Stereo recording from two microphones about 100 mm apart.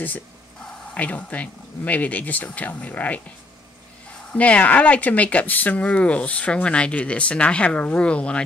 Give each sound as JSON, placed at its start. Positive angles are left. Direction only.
{"t": 0.9, "sound": "speech", "side_deg": 15}
{"t": 4.3, "sound": "speech", "side_deg": 15}